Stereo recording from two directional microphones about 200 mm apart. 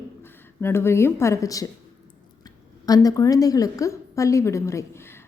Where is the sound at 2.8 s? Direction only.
20° left (ahead or behind).